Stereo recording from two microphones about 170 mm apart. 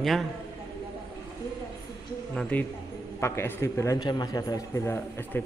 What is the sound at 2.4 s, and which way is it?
A man's voice, 10° left (ahead or behind).